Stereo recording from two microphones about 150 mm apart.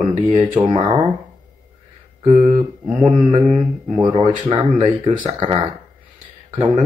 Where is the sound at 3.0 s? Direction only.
30° right (ahead or behind).